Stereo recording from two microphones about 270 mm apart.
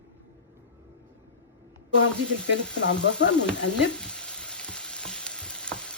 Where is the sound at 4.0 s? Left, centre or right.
Centre.